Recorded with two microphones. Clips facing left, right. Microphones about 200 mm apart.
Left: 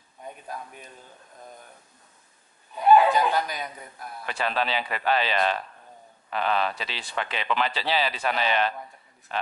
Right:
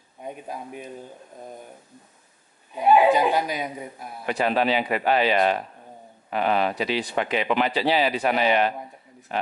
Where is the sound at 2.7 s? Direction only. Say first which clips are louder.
Right 1 dB; 10° right (ahead or behind).